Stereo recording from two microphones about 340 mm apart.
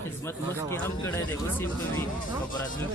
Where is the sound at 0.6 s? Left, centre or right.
Centre.